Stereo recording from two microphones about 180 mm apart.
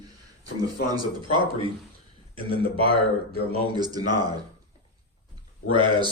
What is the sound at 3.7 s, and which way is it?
Speech, 20° right (ahead or behind).